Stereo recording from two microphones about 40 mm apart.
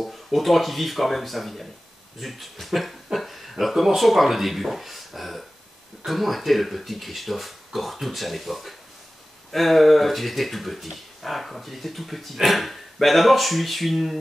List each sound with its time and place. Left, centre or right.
0.0 s speech: centre